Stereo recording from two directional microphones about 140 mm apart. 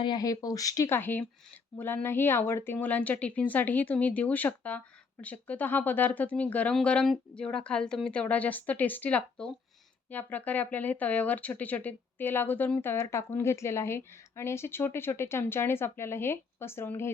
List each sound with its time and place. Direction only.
0.0 s speech: 30° left (ahead or behind)